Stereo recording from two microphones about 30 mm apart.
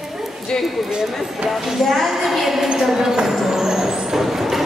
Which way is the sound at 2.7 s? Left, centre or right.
Centre.